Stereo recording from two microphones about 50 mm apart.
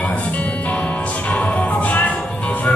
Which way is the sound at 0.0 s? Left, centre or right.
Left.